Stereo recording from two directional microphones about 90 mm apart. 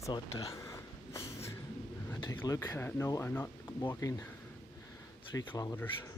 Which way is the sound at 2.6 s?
25° left (ahead or behind).